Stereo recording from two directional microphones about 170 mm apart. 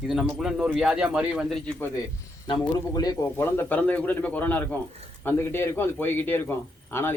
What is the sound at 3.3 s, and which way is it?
Speech, 10° left (ahead or behind).